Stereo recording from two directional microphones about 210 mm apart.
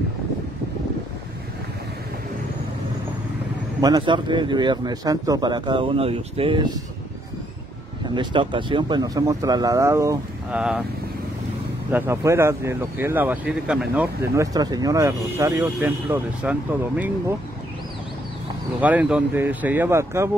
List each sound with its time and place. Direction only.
3.8 s speech: 20° right (ahead or behind)
8.1 s speech: 20° right (ahead or behind)
11.9 s speech: 15° right (ahead or behind)
18.8 s speech: 5° right (ahead or behind)